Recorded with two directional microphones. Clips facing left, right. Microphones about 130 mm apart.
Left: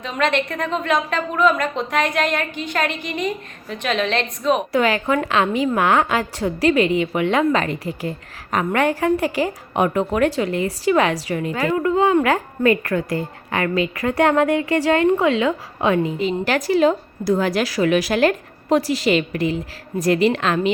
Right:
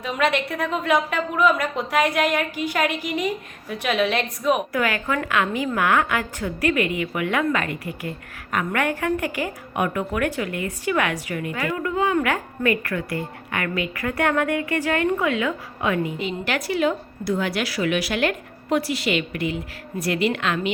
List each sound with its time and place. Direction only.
0.0 s a woman's voice: 10° right (ahead or behind)
4.7 s a woman's voice: 25° left (ahead or behind)